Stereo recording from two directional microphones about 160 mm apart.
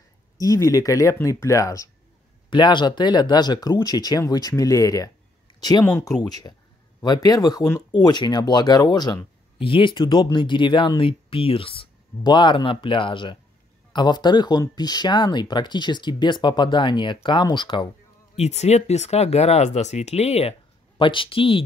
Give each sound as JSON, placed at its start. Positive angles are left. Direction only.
{"t": 0.4, "sound": "speech", "side_deg": 20}
{"t": 18.3, "sound": "speech", "side_deg": 45}